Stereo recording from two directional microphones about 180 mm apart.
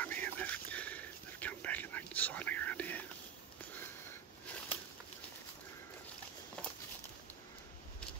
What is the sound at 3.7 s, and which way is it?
Sniff, 10° left (ahead or behind).